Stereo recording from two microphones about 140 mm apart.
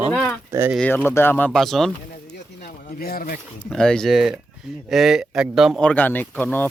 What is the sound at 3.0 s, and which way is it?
Speech, 90° left.